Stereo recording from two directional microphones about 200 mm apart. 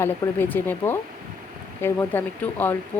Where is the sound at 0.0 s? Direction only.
10° left (ahead or behind).